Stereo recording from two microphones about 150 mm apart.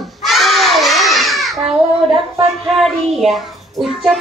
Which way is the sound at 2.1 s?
40° right (ahead or behind).